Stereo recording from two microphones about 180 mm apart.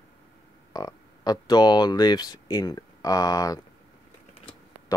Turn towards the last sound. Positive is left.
turn(degrees=20)  # may be behind; listen again after turning